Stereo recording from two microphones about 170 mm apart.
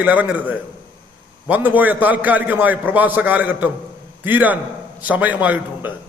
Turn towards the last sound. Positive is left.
turn(degrees=-10)  # may be behind; listen again after turning